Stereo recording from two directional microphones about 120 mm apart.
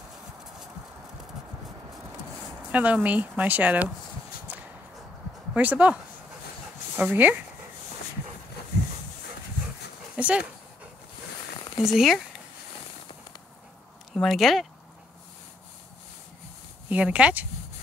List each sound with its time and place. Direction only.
2.7 s speech: 10° right (ahead or behind)
4.5 s a sound: 15° right (ahead or behind)
5.5 s speech: 10° right (ahead or behind)
7.0 s speech: 15° right (ahead or behind)
10.1 s dog: 10° right (ahead or behind)
11.8 s speech: centre (ahead or behind)
14.1 s speech: centre (ahead or behind)
16.9 s speech: 10° right (ahead or behind)